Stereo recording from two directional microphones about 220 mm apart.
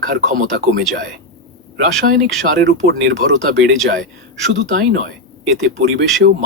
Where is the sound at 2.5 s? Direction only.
55° right (ahead or behind).